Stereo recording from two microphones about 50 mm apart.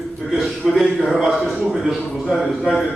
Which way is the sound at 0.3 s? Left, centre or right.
Centre.